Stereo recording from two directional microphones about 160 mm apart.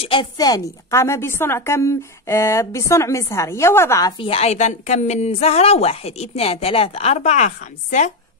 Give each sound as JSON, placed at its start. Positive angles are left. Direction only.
{"t": 0.0, "sound": "a woman's voice", "side_deg": 30}
{"t": 4.2, "sound": "a woman's voice", "side_deg": 40}